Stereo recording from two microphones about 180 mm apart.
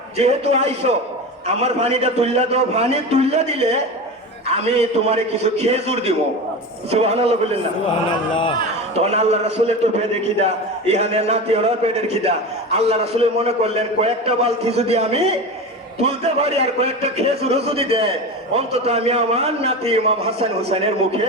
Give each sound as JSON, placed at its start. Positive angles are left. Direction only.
{"t": 0.2, "sound": "a man's voice", "side_deg": -35}
{"t": 9.0, "sound": "a man's voice", "side_deg": -35}